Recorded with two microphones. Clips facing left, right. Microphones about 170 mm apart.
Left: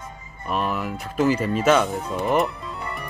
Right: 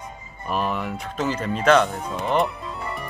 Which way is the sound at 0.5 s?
Centre (ahead or behind).